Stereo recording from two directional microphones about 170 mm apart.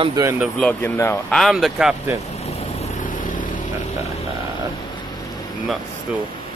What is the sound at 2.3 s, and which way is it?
Vehicle, 40° left (ahead or behind).